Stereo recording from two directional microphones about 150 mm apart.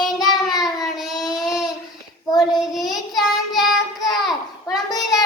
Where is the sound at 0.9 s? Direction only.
Centre (ahead or behind).